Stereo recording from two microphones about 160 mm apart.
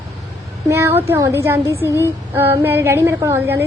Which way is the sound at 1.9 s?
15° left (ahead or behind).